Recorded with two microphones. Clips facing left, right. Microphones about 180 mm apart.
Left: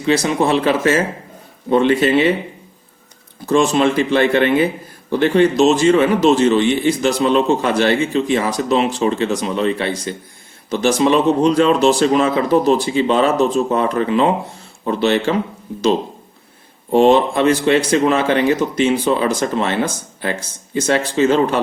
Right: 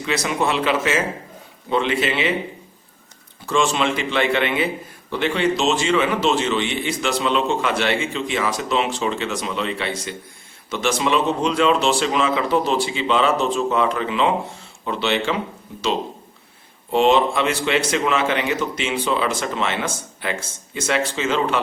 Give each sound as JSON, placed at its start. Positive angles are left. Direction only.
{"t": 0.0, "sound": "speech", "side_deg": 30}
{"t": 3.4, "sound": "speech", "side_deg": 40}
{"t": 16.9, "sound": "speech", "side_deg": 40}